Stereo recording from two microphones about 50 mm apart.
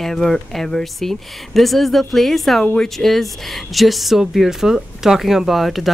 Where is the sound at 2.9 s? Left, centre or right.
Centre.